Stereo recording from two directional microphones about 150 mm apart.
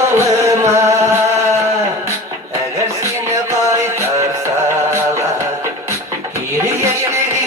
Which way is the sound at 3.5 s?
20° right (ahead or behind).